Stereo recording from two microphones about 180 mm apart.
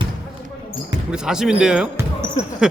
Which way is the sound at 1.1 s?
5° right (ahead or behind).